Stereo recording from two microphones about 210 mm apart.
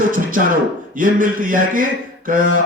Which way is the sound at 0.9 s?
40° right (ahead or behind).